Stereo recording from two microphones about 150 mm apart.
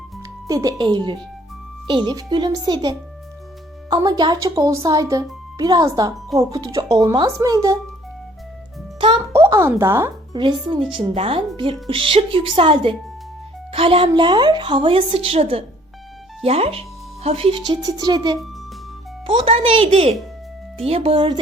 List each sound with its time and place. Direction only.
0.4 s speech: 25° right (ahead or behind)
9.0 s a child's voice: 35° right (ahead or behind)
9.4 s speech: 20° right (ahead or behind)
10.3 s a woman's voice: 30° right (ahead or behind)
14.1 s a woman's voice: 30° right (ahead or behind)